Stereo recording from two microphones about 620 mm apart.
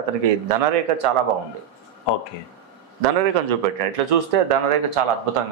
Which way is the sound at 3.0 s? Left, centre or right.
Right.